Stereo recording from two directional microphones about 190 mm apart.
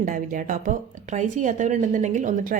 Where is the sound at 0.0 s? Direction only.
45° right (ahead or behind).